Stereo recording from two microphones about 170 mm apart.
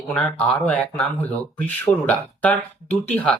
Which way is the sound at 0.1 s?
5° left (ahead or behind).